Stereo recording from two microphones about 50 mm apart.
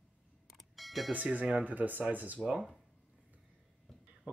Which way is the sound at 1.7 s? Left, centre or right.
Right.